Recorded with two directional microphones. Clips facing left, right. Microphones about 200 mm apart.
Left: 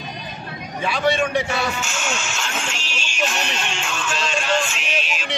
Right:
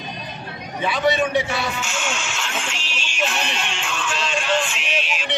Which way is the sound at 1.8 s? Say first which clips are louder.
Even; 45° left (ahead or behind).